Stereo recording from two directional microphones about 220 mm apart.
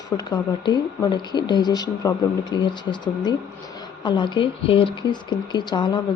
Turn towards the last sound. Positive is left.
turn(degrees=20)  # may be behind; listen again after turning